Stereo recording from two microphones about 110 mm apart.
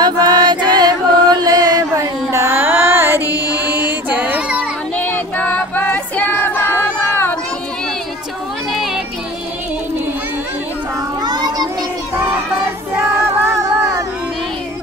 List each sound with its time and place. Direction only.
0.0 s chant: 40° right (ahead or behind)
2.3 s music: 20° right (ahead or behind)
3.3 s mantra: 30° left (ahead or behind)
3.5 s child singing: 15° right (ahead or behind)
4.9 s female singing: 15° left (ahead or behind)
8.7 s a sound: centre (ahead or behind)
11.2 s children playing: 40° right (ahead or behind)
12.9 s child singing: 25° right (ahead or behind)